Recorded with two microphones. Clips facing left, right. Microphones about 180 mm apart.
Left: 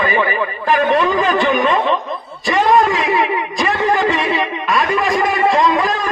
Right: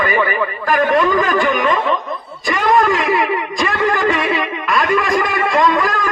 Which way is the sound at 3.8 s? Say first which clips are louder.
Even; 25° left (ahead or behind).